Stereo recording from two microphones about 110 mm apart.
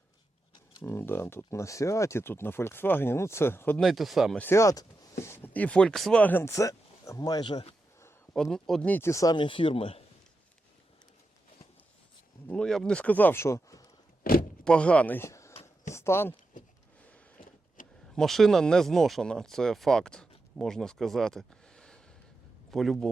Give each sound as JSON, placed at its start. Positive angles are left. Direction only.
{"t": 0.8, "sound": "speech", "side_deg": 20}
{"t": 3.8, "sound": "speech", "side_deg": 0}
{"t": 4.4, "sound": "speech", "side_deg": 25}
{"t": 5.5, "sound": "speech", "side_deg": 10}
{"t": 8.3, "sound": "speech", "side_deg": 5}
{"t": 8.9, "sound": "speech", "side_deg": 25}
{"t": 9.3, "sound": "speech", "side_deg": 50}
{"t": 12.5, "sound": "speech", "side_deg": 5}
{"t": 14.6, "sound": "speech", "side_deg": 10}
{"t": 15.3, "sound": "a sound", "side_deg": 25}
{"t": 16.0, "sound": "speech", "side_deg": 25}
{"t": 18.1, "sound": "speech", "side_deg": 5}